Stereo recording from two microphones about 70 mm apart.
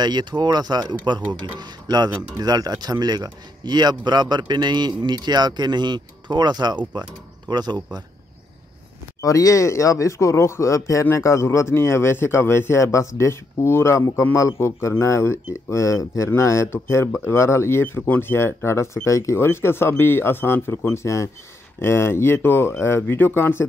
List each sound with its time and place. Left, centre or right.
0.0 s a man's voice: right
9.2 s speech: left
19.4 s speech: left